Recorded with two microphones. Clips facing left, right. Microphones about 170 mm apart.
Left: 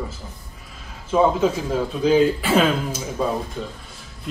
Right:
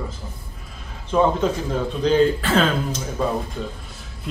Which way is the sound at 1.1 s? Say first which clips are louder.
Left 1 dB; 5° left (ahead or behind).